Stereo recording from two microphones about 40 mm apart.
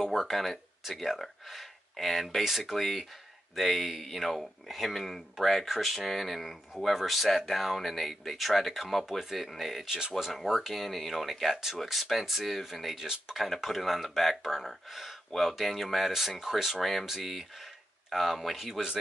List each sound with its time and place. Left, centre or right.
0.0 s speech: centre
9.8 s speech: centre
10.3 s speech: centre
13.0 s speech: centre
13.4 s speech: centre